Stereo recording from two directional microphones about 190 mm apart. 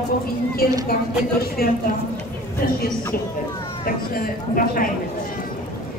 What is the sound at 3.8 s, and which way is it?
Speech, 50° left (ahead or behind).